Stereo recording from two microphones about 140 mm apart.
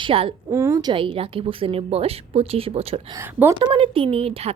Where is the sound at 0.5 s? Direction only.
20° right (ahead or behind); by 3.1 s 45° right (ahead or behind).